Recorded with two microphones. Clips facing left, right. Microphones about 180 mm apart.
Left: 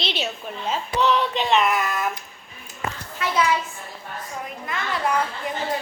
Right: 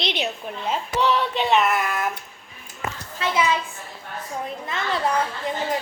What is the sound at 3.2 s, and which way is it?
Speech, 30° right (ahead or behind).